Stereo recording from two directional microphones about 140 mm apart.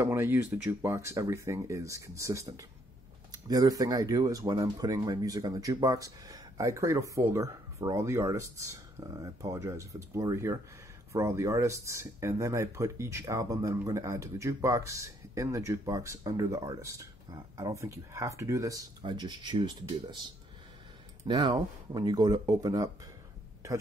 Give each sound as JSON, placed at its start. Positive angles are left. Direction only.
{"t": 0.0, "sound": "speech", "side_deg": -15}